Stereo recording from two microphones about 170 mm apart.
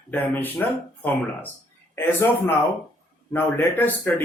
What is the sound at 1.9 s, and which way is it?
A man's voice, 15° left (ahead or behind).